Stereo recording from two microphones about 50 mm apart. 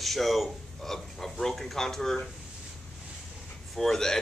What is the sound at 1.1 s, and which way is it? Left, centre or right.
Speech, centre.